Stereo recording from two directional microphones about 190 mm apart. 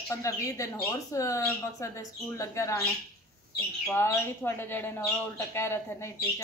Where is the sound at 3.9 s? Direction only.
15° left (ahead or behind).